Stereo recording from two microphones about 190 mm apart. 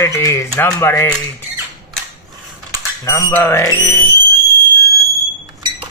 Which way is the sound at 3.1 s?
15° left (ahead or behind).